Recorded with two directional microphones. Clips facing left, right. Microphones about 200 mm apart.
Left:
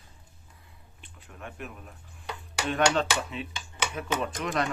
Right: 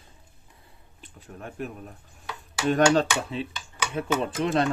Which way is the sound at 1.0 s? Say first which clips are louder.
Right 4 dB; 40° right (ahead or behind).